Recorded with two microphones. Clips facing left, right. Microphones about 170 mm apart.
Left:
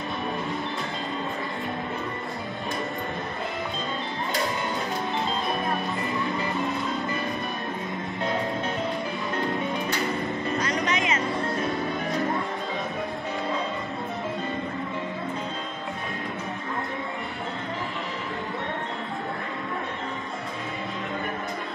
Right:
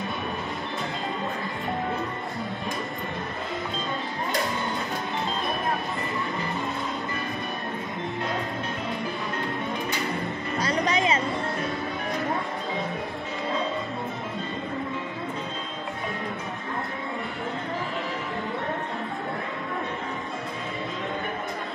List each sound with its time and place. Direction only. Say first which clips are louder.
10.6 s music: right 6 dB; 30° right (ahead or behind)